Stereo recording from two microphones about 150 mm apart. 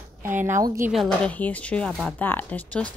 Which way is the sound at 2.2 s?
10° left (ahead or behind).